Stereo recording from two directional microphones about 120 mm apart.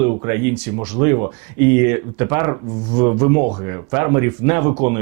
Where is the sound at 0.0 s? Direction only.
20° right (ahead or behind).